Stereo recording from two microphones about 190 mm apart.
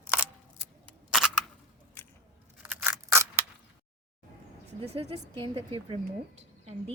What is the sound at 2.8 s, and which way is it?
Scissors, 15° right (ahead or behind).